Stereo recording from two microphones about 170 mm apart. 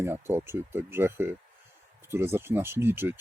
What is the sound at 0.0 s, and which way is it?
Speech, 15° right (ahead or behind).